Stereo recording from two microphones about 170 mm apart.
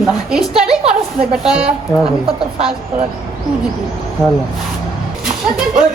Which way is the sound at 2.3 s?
35° right (ahead or behind).